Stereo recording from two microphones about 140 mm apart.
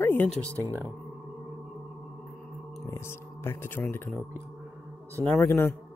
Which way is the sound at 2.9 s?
15° left (ahead or behind).